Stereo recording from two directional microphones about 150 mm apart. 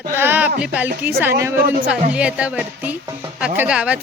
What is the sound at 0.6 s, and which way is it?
Speech, 10° right (ahead or behind).